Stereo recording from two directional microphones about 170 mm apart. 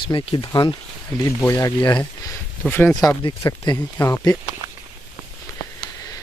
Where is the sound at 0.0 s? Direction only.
30° left (ahead or behind).